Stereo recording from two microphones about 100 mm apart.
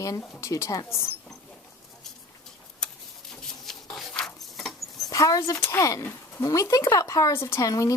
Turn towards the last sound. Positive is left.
turn(degrees=35)  # may be behind; listen again after turning